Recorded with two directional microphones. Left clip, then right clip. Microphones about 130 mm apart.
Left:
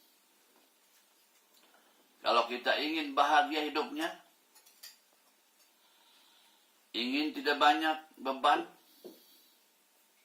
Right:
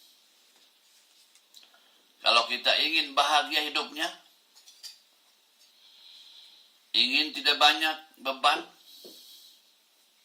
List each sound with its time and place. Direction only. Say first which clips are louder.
2.2 s a man's voice: right 6 dB; 20° right (ahead or behind)
6.9 s a man's voice: right 9 dB; 20° right (ahead or behind)